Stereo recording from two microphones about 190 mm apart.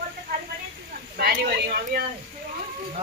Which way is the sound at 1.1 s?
55° right (ahead or behind).